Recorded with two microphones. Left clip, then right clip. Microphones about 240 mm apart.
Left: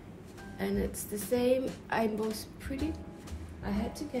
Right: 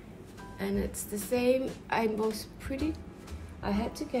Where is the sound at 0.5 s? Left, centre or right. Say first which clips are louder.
Even; centre.